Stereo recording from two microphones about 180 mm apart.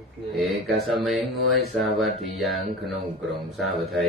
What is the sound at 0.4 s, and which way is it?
Speech, centre (ahead or behind).